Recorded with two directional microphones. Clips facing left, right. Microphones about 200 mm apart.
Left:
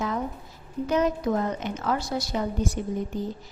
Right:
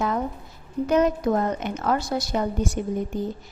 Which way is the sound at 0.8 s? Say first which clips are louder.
Right 3 dB; 55° right (ahead or behind).